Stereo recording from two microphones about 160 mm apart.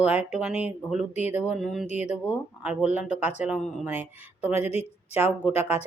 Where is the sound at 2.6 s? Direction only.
10° right (ahead or behind).